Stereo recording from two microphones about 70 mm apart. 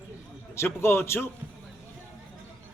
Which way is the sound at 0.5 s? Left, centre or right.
Left.